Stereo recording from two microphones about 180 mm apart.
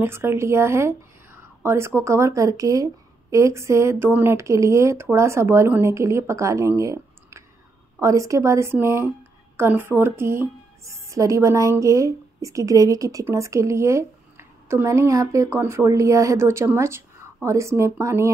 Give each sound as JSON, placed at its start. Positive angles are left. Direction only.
{"t": 0.0, "sound": "speech", "side_deg": -15}